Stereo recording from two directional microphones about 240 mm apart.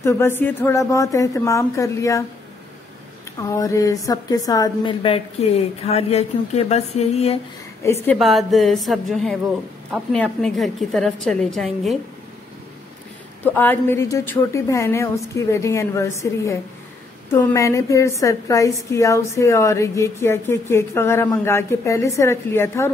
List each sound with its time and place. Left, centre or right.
0.0 s a woman's voice: centre
3.3 s a woman's voice: centre
7.8 s a woman's voice: centre
13.4 s a woman's voice: centre